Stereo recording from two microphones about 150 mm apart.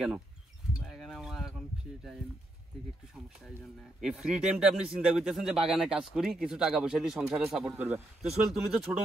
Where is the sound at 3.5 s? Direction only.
5° right (ahead or behind).